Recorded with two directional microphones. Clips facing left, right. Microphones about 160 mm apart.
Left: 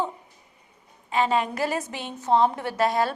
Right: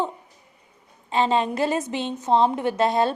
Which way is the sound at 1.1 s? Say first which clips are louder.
Right 2 dB; 30° right (ahead or behind).